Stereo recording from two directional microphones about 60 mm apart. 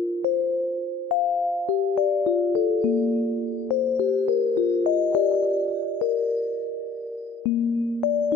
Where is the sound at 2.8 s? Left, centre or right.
Right.